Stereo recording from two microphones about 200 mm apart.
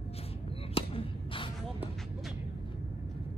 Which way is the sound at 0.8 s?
25° left (ahead or behind).